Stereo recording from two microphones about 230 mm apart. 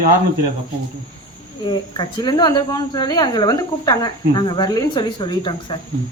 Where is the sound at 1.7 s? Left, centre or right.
Centre.